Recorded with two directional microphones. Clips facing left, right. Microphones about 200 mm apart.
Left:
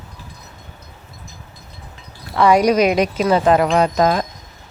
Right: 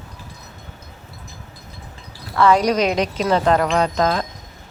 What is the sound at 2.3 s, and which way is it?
Speech, 15° left (ahead or behind).